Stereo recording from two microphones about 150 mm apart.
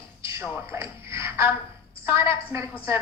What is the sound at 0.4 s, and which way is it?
A woman's voice, 15° right (ahead or behind).